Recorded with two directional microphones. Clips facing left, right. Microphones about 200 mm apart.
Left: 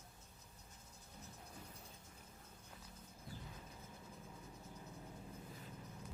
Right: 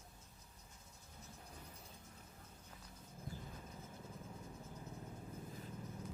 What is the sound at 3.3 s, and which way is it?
Thunder, 45° right (ahead or behind).